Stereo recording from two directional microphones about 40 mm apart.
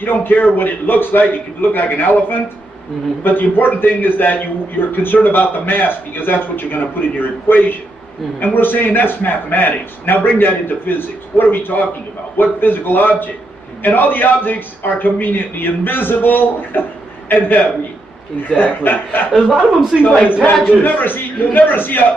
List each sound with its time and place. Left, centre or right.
0.0 s a man's voice: left
18.6 s a man's voice: left
19.3 s a man's voice: centre
20.4 s a man's voice: left